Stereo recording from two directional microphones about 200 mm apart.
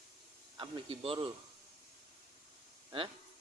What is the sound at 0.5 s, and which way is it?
Speech, 25° right (ahead or behind).